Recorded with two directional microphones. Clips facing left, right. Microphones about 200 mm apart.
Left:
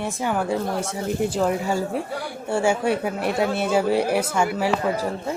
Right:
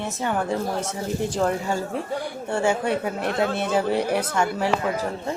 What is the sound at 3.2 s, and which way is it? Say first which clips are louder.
Speech: left 1 dB; 10° left (ahead or behind).